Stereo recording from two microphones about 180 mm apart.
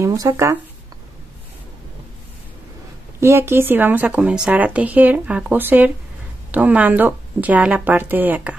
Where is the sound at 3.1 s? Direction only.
15° right (ahead or behind).